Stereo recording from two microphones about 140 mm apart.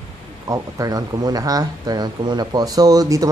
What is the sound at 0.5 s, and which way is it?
Speech, 25° right (ahead or behind).